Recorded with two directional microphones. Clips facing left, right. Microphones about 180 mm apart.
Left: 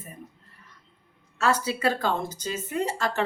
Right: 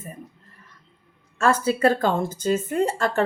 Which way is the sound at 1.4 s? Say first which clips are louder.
Right 5 dB; 50° right (ahead or behind).